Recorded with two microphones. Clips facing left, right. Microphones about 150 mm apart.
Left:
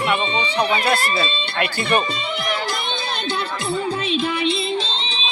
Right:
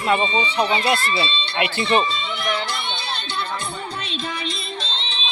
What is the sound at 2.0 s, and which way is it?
Music, 45° left (ahead or behind).